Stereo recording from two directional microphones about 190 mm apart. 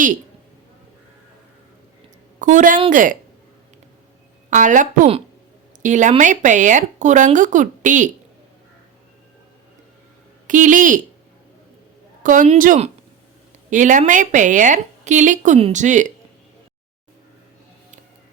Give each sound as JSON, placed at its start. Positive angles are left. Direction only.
{"t": 2.4, "sound": "a woman's voice", "side_deg": -40}
{"t": 4.4, "sound": "a woman's voice", "side_deg": -40}
{"t": 10.4, "sound": "speech", "side_deg": -40}
{"t": 12.2, "sound": "a woman's voice", "side_deg": -45}